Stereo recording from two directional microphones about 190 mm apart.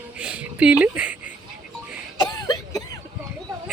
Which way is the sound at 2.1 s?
20° left (ahead or behind).